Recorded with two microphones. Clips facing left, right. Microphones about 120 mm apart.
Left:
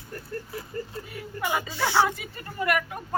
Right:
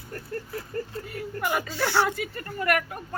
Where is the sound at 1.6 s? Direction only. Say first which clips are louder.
Left 3 dB; 15° left (ahead or behind).